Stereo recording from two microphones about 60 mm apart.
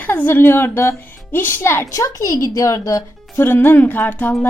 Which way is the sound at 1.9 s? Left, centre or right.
Left.